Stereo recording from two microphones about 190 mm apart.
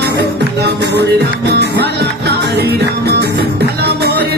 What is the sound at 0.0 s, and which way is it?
Music, 60° right (ahead or behind).